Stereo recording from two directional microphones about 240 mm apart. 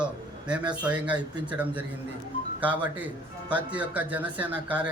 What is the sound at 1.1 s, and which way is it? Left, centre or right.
Speech, centre.